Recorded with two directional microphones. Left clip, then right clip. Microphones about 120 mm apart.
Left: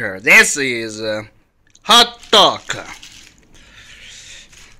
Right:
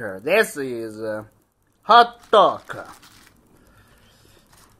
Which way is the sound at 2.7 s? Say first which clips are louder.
Left 8 dB; 25° left (ahead or behind).